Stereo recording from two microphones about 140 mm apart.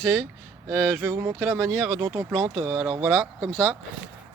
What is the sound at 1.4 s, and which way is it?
Speech, centre (ahead or behind).